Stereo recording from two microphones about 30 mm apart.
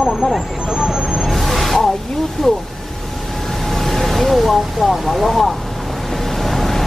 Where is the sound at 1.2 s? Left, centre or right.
Centre.